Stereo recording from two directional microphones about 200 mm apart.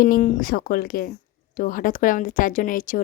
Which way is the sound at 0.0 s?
40° left (ahead or behind).